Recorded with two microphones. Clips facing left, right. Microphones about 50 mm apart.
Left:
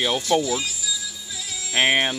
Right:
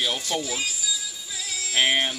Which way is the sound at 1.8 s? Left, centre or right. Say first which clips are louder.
Left 3 dB; left.